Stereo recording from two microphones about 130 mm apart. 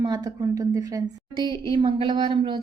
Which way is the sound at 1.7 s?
40° right (ahead or behind).